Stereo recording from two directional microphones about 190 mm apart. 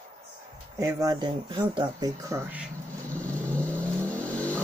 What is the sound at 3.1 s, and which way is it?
Vehicle, 5° left (ahead or behind).